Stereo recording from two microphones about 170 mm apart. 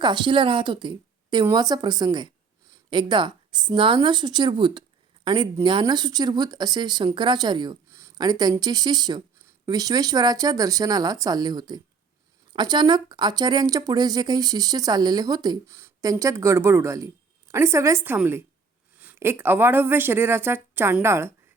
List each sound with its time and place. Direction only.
0.0 s a woman's voice: 25° right (ahead or behind)